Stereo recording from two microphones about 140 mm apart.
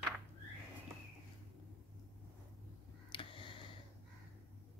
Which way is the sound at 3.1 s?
35° left (ahead or behind).